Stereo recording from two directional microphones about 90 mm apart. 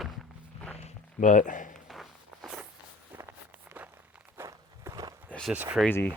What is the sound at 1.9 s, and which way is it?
Walk, centre (ahead or behind).